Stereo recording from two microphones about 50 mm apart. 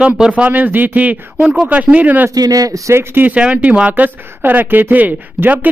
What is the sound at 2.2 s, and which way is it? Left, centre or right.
Speech, right.